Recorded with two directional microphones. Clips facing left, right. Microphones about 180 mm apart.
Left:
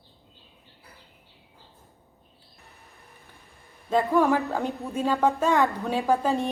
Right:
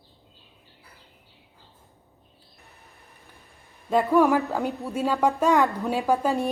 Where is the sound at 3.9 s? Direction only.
10° right (ahead or behind).